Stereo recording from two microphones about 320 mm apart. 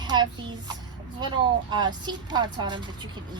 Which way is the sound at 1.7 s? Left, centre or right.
Centre.